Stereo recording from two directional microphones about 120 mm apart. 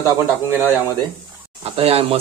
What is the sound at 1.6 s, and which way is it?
Speech, 55° right (ahead or behind).